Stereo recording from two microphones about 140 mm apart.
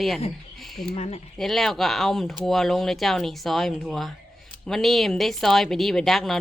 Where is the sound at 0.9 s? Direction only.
50° left (ahead or behind).